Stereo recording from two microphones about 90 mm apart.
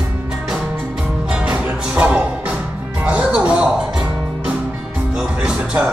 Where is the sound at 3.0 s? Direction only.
15° right (ahead or behind).